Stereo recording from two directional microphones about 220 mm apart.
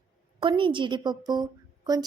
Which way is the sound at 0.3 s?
20° right (ahead or behind).